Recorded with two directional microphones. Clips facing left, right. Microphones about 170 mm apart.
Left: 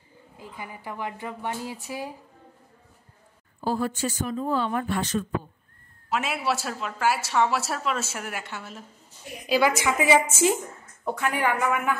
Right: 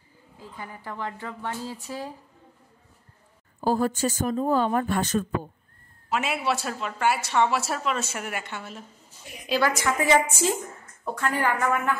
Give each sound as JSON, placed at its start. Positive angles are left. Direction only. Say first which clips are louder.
{"t": 0.4, "sound": "a woman's voice", "louder": "even", "side_deg": 10}
{"t": 3.6, "sound": "speech", "louder": "right 3 dB", "side_deg": -45}
{"t": 6.0, "sound": "a woman's voice", "louder": "right 1 dB", "side_deg": 0}